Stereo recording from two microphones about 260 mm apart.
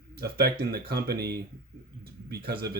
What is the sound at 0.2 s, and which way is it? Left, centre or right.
Speech, right.